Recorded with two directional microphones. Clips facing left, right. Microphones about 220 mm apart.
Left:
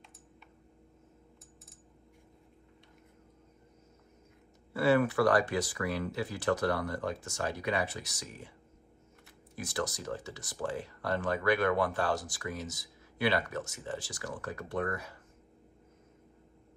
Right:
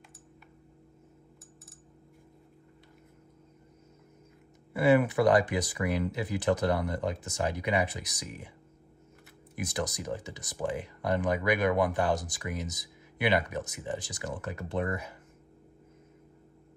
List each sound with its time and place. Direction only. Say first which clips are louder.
4.7 s speech: right 3 dB; 15° right (ahead or behind)
9.6 s speech: right 2 dB; 20° right (ahead or behind)